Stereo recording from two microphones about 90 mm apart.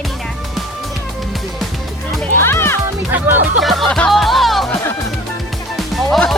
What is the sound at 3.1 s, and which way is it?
Music, 20° right (ahead or behind).